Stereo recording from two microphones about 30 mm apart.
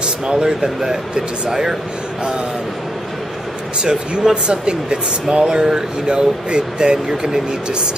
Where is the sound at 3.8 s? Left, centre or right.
Right.